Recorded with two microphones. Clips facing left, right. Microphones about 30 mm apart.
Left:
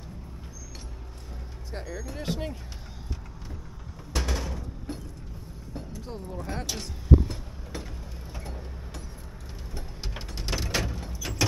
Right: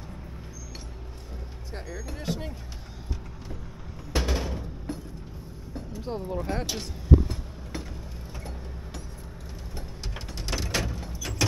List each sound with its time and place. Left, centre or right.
1.7 s speech: centre
2.2 s speech: centre
4.1 s a sound: centre
4.9 s vehicle: centre
5.9 s speech: right
6.5 s speech: centre
10.0 s sliding door: centre